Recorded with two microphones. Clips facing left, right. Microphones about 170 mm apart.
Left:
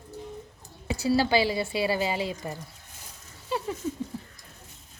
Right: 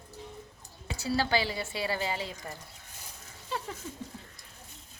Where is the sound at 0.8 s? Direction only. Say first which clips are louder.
Left 6 dB; 10° left (ahead or behind).